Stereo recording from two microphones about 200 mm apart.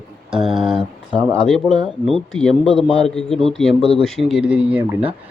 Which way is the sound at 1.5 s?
Centre (ahead or behind).